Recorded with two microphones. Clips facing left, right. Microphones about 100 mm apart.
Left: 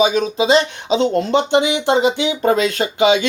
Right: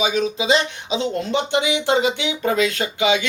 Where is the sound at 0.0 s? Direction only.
45° left (ahead or behind).